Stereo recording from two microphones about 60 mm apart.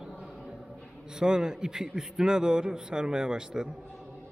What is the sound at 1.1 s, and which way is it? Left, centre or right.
A man's voice, centre.